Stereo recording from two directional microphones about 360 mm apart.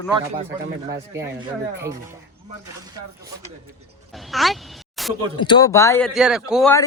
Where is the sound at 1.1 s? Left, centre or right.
Centre.